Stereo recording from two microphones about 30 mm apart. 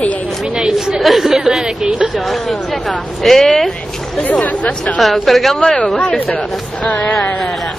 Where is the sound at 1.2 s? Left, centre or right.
Centre.